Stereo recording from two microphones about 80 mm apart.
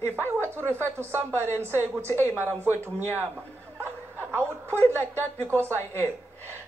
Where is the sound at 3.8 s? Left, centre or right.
Right.